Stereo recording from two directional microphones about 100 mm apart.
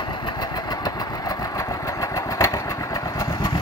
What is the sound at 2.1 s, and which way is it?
Motorcycle, 35° left (ahead or behind).